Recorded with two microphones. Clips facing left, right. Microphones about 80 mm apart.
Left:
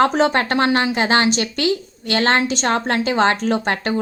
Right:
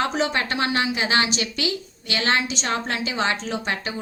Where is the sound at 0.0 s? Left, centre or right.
Left.